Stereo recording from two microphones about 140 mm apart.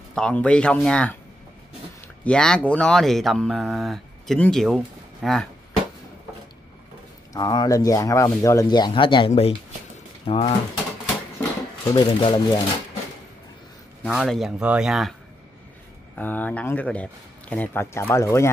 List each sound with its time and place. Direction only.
0.1 s speech: 5° left (ahead or behind)
2.2 s speech: 5° left (ahead or behind)
7.3 s speech: 30° left (ahead or behind)
11.8 s speech: 25° left (ahead or behind)
14.0 s speech: centre (ahead or behind)
16.2 s speech: 10° left (ahead or behind)